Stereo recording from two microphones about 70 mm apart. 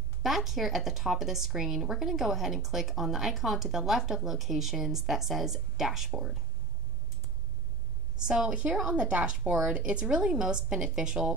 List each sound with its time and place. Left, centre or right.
0.2 s speech: centre
8.3 s a woman's voice: centre